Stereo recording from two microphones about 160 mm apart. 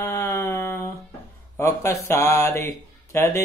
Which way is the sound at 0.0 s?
15° left (ahead or behind).